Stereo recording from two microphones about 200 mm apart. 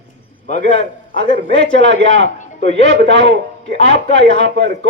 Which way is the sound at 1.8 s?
65° right (ahead or behind).